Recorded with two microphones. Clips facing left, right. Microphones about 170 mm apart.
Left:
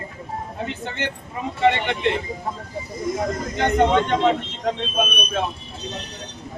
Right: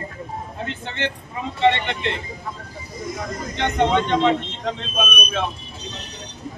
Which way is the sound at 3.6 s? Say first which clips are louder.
Left 2 dB; 5° left (ahead or behind).